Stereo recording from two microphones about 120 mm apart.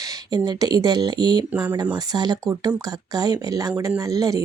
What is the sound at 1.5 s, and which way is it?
Speech, 15° right (ahead or behind).